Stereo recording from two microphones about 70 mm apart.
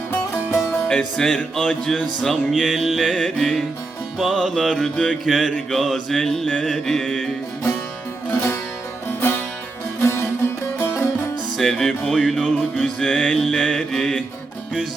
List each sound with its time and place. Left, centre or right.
0.9 s music: centre
8.3 s music: left
10.0 s music: left
11.5 s music: centre